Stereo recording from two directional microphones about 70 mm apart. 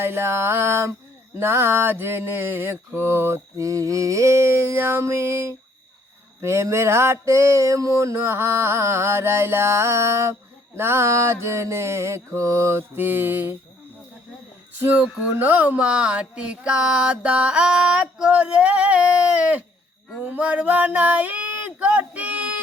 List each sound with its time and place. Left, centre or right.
0.0 s mantra: right
14.8 s a sound: right
20.2 s speech: right